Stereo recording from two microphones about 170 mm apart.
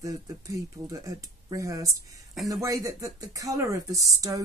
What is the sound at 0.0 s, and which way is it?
Speech, 20° right (ahead or behind).